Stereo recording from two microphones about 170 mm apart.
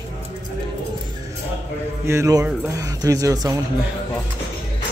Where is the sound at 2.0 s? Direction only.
15° right (ahead or behind).